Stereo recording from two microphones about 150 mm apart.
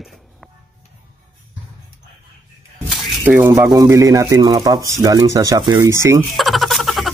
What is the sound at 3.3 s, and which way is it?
Speech, 15° right (ahead or behind).